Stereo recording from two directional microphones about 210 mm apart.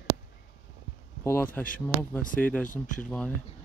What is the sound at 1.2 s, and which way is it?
Speech, 10° left (ahead or behind).